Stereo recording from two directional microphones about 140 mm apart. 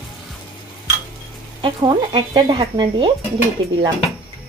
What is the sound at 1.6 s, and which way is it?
Speech, 35° right (ahead or behind).